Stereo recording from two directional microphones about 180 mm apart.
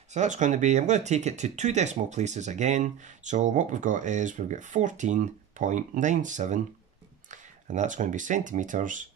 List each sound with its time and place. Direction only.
0.1 s speech: 40° right (ahead or behind)